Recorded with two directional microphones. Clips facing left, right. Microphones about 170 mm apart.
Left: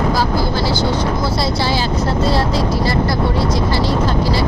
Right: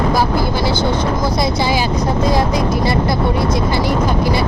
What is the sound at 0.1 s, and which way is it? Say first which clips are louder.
Speech: right 1 dB; 20° right (ahead or behind).